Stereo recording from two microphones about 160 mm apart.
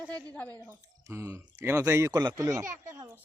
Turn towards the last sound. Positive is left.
turn(degrees=-20)  # may be behind; listen again after turning